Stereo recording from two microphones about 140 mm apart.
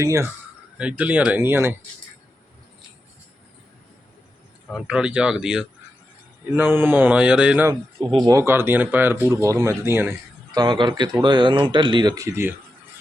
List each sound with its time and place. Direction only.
0.0 s speech: 20° right (ahead or behind)
0.8 s speech: 10° right (ahead or behind)
4.7 s speech: 5° right (ahead or behind)
6.5 s speech: 15° right (ahead or behind)
7.7 s speech: 30° right (ahead or behind)
10.5 s speech: 30° right (ahead or behind)